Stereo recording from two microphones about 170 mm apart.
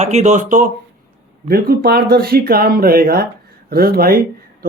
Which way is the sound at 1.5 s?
65° right (ahead or behind).